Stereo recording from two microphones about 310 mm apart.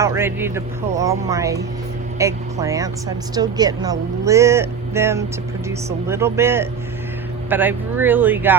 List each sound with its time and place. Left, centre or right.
0.0 s speech: centre